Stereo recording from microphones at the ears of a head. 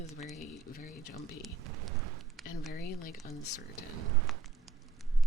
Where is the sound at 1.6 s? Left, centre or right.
Right.